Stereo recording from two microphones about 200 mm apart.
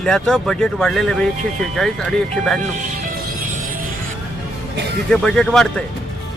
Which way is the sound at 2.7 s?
40° right (ahead or behind).